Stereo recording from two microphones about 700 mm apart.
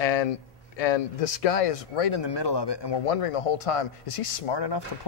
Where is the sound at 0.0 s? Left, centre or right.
Left.